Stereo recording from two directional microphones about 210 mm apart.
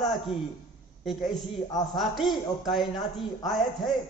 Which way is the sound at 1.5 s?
20° left (ahead or behind).